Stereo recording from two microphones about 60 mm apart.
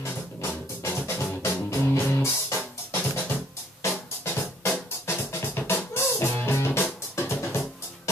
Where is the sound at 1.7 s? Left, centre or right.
Left.